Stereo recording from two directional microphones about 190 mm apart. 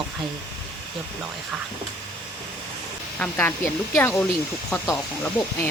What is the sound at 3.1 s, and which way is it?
Speech, 10° left (ahead or behind).